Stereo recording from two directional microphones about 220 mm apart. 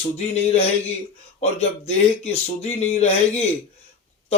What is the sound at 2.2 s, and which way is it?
Speech, 30° left (ahead or behind).